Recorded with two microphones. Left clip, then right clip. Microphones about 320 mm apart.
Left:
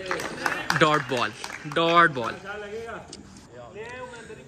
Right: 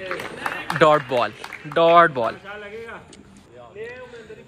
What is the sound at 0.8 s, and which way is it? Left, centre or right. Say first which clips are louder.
Speech: right 7 dB; centre.